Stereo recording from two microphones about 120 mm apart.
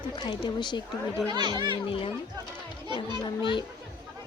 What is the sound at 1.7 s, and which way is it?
A child's voice, 50° left (ahead or behind).